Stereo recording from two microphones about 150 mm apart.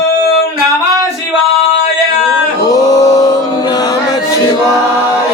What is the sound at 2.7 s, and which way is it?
Male singing, 25° left (ahead or behind).